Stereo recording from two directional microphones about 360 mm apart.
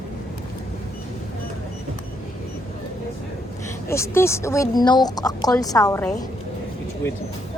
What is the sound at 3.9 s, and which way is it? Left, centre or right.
Speech, centre.